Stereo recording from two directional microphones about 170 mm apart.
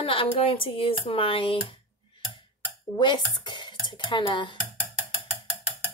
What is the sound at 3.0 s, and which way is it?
Speech, 25° left (ahead or behind).